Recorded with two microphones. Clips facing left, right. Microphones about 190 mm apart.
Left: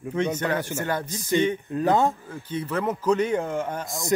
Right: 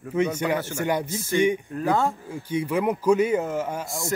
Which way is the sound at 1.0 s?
15° left (ahead or behind).